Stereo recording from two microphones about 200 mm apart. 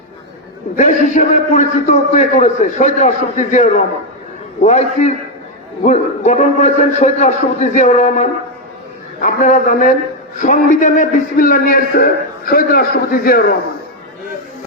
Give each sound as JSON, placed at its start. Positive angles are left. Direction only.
{"t": 0.8, "sound": "a man's voice", "side_deg": 40}